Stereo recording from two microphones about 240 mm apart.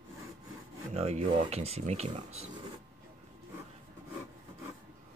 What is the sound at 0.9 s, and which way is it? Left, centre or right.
Speech, right.